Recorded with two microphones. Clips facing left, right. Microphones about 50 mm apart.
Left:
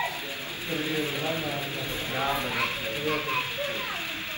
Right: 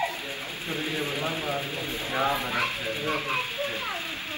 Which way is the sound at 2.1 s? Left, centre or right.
Right.